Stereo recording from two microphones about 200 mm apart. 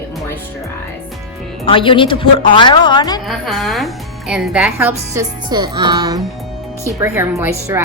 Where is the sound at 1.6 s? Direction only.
25° left (ahead or behind).